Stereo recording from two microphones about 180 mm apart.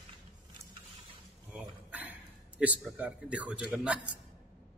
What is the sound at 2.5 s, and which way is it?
A man's voice, 5° right (ahead or behind).